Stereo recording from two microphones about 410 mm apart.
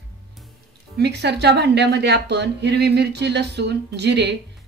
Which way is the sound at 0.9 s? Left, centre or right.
Right.